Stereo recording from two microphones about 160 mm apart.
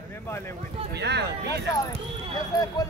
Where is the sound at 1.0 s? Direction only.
90° right.